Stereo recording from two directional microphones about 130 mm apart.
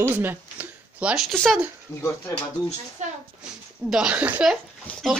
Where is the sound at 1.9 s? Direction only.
20° left (ahead or behind).